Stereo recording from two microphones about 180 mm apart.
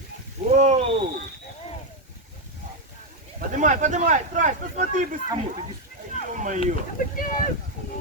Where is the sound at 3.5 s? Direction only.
45° right (ahead or behind).